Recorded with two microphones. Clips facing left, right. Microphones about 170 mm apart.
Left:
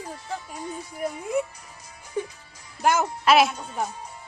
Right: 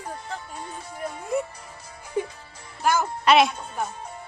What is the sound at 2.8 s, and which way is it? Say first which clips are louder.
Speech: left 1 dB; 20° left (ahead or behind).